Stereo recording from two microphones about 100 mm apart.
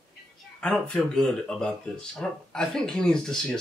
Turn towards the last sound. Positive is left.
turn(degrees=5)  # may be behind; listen again after turning